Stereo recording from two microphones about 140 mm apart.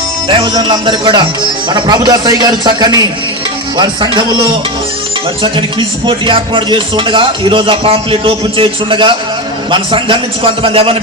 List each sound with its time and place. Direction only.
0.3 s speech: 35° right (ahead or behind)
6.1 s speech: 35° right (ahead or behind)